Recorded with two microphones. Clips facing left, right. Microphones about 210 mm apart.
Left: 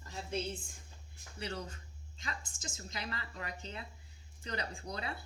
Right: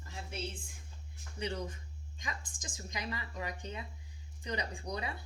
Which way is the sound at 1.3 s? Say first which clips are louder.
Right 3 dB; 15° right (ahead or behind).